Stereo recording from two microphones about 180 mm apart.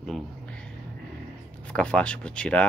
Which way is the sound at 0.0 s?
5° left (ahead or behind).